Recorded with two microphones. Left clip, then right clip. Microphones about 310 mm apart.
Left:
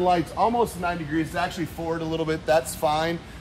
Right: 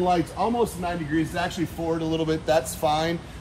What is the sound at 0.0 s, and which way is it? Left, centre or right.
A man's voice, centre.